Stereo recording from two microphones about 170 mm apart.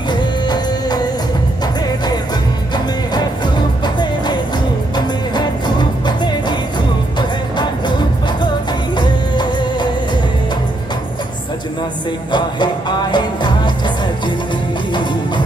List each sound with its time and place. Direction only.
0.1 s music: 25° left (ahead or behind)
2.7 s music: 25° left (ahead or behind)
8.9 s music: 25° left (ahead or behind)
12.3 s music: 25° left (ahead or behind)